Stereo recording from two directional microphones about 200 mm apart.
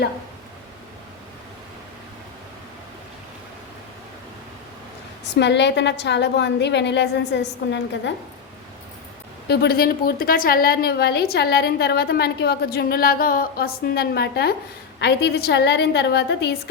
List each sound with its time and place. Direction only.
5.3 s a woman's voice: 60° left (ahead or behind)
9.5 s a woman's voice: 55° left (ahead or behind)